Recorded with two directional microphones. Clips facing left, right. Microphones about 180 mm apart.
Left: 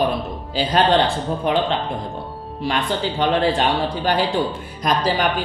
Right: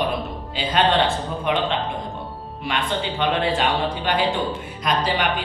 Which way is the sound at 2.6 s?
40° left (ahead or behind).